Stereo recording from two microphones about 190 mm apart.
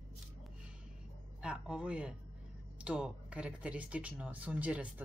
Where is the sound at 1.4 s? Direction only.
5° right (ahead or behind).